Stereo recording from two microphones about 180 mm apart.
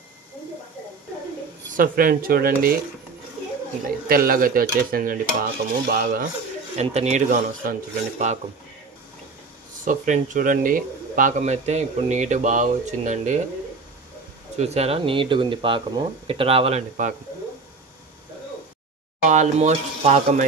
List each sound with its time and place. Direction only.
1.8 s speech: 55° right (ahead or behind)
4.1 s speech: 55° right (ahead or behind)
6.8 s speech: 35° right (ahead or behind)
9.8 s speech: 45° right (ahead or behind)
14.6 s speech: 35° right (ahead or behind)
19.2 s speech: 40° right (ahead or behind)